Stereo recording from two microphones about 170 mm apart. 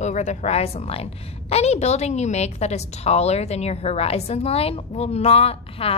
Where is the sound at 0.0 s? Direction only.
45° left (ahead or behind).